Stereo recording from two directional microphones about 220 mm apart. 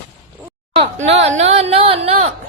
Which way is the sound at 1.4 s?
30° right (ahead or behind).